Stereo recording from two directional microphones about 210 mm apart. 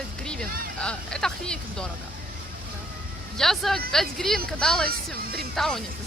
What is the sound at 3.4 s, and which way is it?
Speech, centre (ahead or behind).